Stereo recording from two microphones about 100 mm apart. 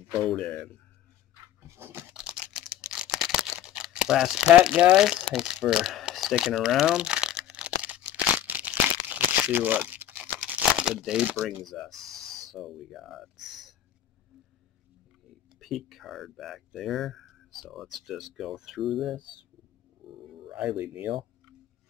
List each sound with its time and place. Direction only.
0.2 s speech: 10° left (ahead or behind)
1.8 s a sound: 25° right (ahead or behind)
2.1 s a sound: 5° right (ahead or behind)
4.6 s crumpling: 10° right (ahead or behind)
11.4 s speech: centre (ahead or behind)
15.6 s speech: centre (ahead or behind)
20.4 s speech: 10° right (ahead or behind)